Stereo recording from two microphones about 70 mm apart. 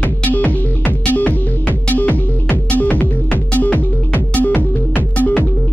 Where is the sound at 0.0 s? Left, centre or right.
Left.